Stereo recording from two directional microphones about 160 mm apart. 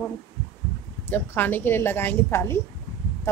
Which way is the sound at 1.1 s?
10° left (ahead or behind).